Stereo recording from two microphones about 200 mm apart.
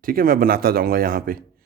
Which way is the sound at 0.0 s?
45° right (ahead or behind).